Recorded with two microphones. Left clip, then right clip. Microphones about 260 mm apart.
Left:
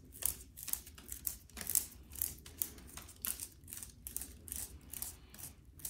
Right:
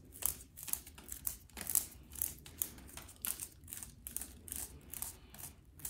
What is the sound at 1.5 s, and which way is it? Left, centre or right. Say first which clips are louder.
Typewriter: left 1 dB; centre.